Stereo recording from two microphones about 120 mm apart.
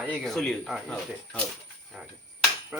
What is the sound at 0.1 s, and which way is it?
Speech, centre (ahead or behind).